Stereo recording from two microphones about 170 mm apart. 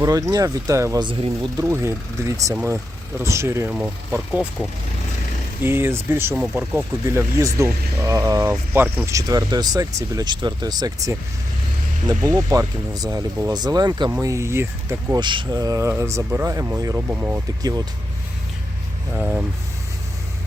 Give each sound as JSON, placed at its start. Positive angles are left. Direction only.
{"t": 0.0, "sound": "speech", "side_deg": -20}
{"t": 1.0, "sound": "speech", "side_deg": -30}
{"t": 1.6, "sound": "speech", "side_deg": -15}
{"t": 5.6, "sound": "speech", "side_deg": -15}
{"t": 19.1, "sound": "vehicle", "side_deg": -5}